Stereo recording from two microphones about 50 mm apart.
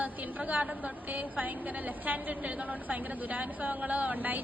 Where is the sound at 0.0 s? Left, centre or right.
Right.